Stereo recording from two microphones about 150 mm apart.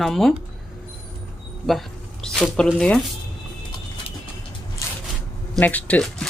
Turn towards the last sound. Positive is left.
turn(degrees=10)  # may be behind; listen again after turning